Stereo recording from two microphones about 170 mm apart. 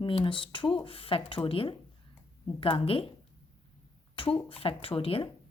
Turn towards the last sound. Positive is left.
turn(degrees=35)  # may be behind; listen again after turning